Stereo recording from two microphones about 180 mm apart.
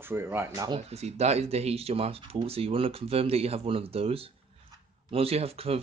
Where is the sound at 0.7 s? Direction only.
35° right (ahead or behind).